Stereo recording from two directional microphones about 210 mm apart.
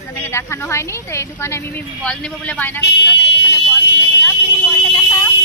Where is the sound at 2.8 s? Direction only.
55° left (ahead or behind).